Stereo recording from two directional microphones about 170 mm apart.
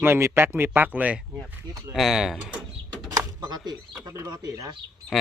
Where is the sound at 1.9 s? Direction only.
Centre (ahead or behind).